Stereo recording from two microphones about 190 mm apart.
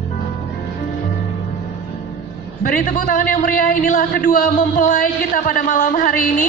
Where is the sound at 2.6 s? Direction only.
45° left (ahead or behind).